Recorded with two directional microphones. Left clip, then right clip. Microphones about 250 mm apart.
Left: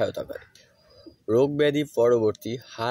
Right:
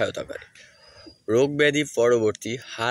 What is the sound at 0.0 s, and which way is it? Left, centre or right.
Speech, centre.